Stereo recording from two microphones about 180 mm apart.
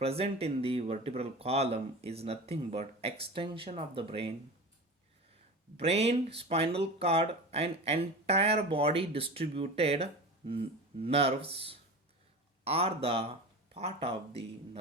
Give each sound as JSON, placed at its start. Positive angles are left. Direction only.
{"t": 0.0, "sound": "speech", "side_deg": -35}
{"t": 5.7, "sound": "speech", "side_deg": -35}